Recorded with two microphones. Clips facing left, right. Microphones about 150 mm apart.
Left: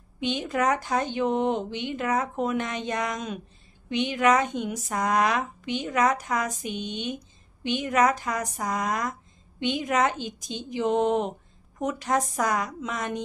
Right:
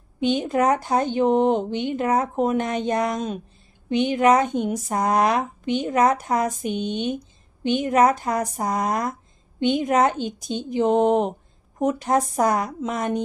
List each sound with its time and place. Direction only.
0.4 s speech: 35° right (ahead or behind)
4.4 s speech: 50° right (ahead or behind)
6.6 s speech: 50° right (ahead or behind)
7.8 s speech: 30° right (ahead or behind)